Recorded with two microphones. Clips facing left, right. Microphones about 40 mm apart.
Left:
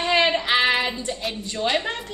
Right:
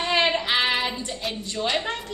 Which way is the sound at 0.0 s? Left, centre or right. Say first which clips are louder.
Left 2 dB; centre.